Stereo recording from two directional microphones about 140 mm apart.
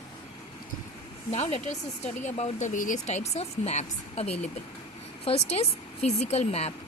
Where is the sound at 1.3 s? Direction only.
50° left (ahead or behind).